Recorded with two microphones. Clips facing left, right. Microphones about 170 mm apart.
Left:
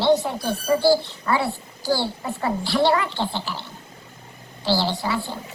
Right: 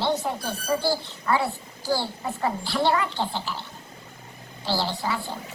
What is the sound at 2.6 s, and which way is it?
Speech, 80° left.